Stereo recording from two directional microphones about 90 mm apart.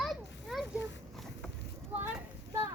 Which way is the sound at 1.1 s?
5° left (ahead or behind).